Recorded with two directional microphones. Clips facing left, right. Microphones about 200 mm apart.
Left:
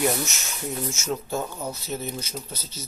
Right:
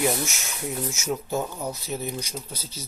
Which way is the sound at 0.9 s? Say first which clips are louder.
Right 1 dB; 15° right (ahead or behind).